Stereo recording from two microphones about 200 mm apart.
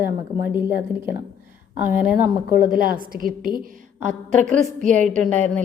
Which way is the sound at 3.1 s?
45° right (ahead or behind).